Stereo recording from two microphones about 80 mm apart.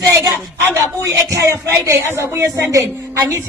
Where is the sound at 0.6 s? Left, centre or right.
Right.